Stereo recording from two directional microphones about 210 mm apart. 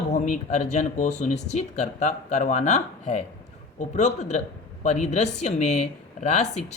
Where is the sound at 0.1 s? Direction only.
35° left (ahead or behind).